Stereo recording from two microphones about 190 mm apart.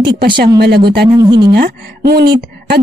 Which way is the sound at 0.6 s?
60° right (ahead or behind).